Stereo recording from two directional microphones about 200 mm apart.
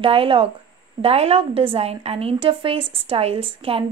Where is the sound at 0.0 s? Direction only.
25° right (ahead or behind).